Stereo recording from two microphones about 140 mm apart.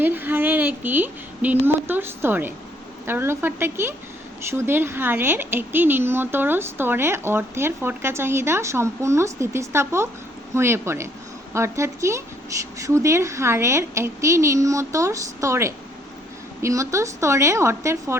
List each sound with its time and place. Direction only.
0.0 s a woman's voice: 15° right (ahead or behind)